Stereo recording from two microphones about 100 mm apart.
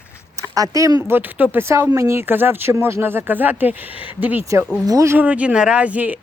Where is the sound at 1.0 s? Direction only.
20° right (ahead or behind).